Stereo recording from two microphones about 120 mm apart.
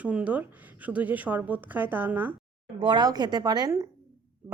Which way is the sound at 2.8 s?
40° right (ahead or behind).